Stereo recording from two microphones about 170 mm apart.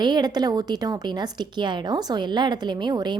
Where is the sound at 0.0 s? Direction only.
25° right (ahead or behind).